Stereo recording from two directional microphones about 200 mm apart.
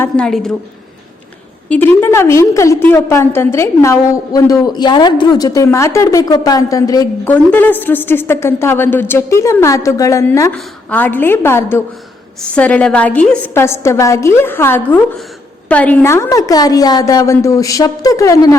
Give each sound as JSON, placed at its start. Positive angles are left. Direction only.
{"t": 0.0, "sound": "a woman's voice", "side_deg": 5}
{"t": 2.0, "sound": "a woman's voice", "side_deg": 10}